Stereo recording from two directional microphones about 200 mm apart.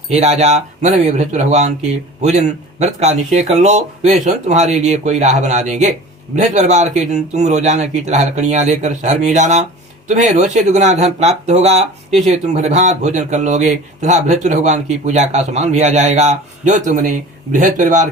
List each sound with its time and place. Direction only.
0.1 s speech: 35° right (ahead or behind)